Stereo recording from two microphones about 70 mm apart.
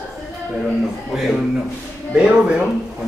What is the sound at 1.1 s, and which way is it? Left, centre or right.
A man's voice, centre.